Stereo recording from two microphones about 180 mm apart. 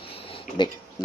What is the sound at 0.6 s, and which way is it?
Speech, 25° left (ahead or behind).